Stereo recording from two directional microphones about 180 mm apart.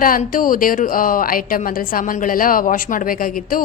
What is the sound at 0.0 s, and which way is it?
A woman's voice, 50° left (ahead or behind).